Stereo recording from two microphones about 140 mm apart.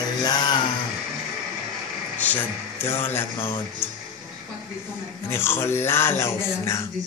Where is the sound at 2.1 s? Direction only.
10° left (ahead or behind).